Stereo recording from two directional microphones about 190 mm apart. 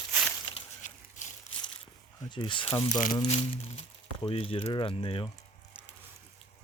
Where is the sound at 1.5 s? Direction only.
30° left (ahead or behind).